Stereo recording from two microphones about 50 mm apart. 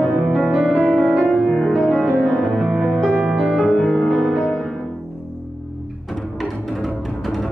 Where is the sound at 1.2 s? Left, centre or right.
Left.